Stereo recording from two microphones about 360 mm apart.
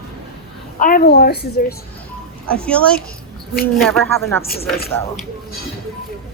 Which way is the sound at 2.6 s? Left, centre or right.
Centre.